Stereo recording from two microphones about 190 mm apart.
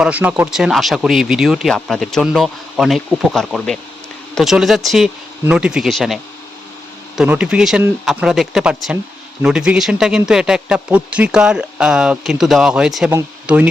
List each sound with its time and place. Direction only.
0.0 s speech: 5° right (ahead or behind)
7.2 s speech: 5° right (ahead or behind)